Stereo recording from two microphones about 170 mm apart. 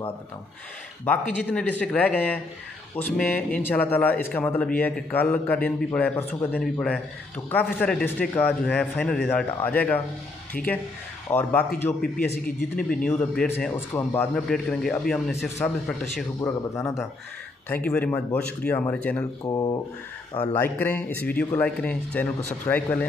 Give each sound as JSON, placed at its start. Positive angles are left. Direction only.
{"t": 1.0, "sound": "a man's voice", "side_deg": 10}
{"t": 16.3, "sound": "speech", "side_deg": 20}
{"t": 19.4, "sound": "speech", "side_deg": 25}
{"t": 20.3, "sound": "speech", "side_deg": 10}